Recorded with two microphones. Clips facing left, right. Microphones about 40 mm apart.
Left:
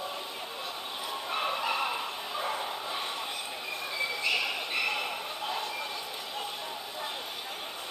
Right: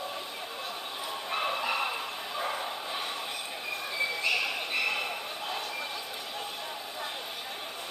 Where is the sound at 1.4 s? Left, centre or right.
Centre.